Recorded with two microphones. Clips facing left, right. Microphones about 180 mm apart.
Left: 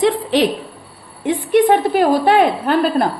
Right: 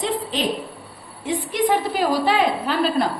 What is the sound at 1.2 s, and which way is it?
A woman's voice, 60° left (ahead or behind).